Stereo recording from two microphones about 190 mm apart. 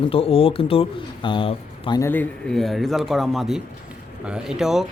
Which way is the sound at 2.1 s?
5° left (ahead or behind).